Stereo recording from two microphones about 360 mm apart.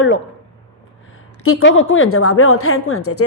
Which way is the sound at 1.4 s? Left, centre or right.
Left.